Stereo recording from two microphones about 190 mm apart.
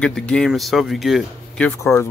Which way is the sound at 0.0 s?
5° left (ahead or behind).